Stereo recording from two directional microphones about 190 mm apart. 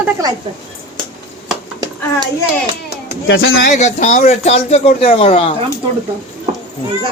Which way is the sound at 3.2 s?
85° left.